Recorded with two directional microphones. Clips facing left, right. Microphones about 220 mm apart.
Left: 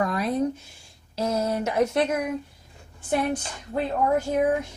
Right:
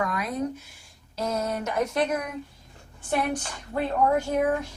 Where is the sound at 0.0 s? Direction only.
30° left (ahead or behind).